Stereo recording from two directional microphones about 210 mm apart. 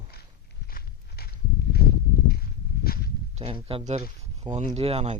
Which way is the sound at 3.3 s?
25° right (ahead or behind).